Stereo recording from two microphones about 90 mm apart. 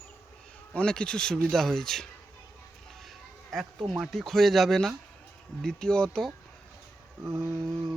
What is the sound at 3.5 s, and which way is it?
Speech, centre (ahead or behind).